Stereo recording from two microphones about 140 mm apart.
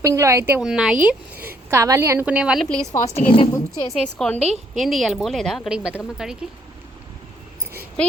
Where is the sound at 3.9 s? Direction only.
5° left (ahead or behind).